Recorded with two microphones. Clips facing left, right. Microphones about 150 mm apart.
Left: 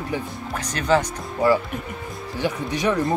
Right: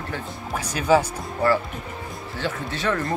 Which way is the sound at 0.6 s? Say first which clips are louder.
Right 1 dB; 10° right (ahead or behind).